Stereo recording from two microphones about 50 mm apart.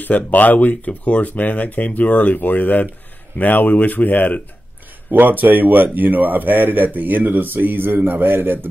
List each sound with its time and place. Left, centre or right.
0.0 s speech: left
5.1 s speech: right